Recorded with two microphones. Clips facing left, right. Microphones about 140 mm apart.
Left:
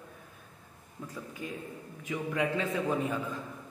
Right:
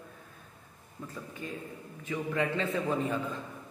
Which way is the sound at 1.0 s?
10° left (ahead or behind).